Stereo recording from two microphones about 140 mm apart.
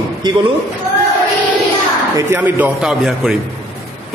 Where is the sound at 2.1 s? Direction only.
15° right (ahead or behind).